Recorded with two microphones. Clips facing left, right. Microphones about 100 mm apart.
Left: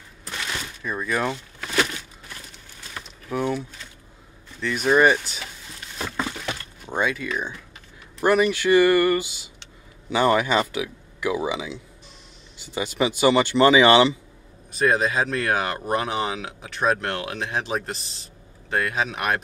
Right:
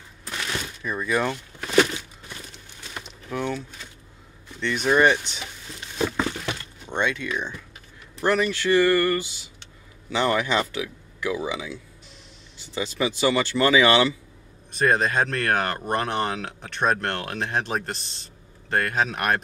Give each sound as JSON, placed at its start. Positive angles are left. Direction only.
{"t": 0.8, "sound": "speech", "side_deg": 0}
{"t": 3.3, "sound": "speech", "side_deg": 10}
{"t": 5.9, "sound": "a sound", "side_deg": -15}
{"t": 6.9, "sound": "speech", "side_deg": 5}
{"t": 14.7, "sound": "speech", "side_deg": 0}